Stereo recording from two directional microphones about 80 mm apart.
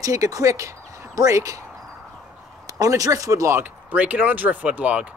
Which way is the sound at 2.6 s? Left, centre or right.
Right.